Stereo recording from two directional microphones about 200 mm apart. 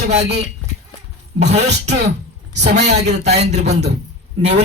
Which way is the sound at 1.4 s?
35° right (ahead or behind).